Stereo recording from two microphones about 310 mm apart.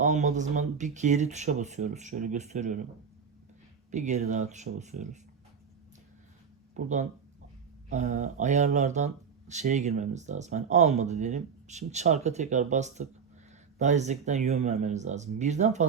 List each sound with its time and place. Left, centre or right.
0.0 s speech: right
3.9 s speech: right
6.7 s speech: right